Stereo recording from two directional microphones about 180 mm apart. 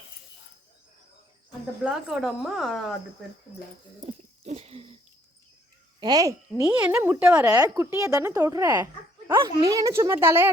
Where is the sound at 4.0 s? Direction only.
35° right (ahead or behind).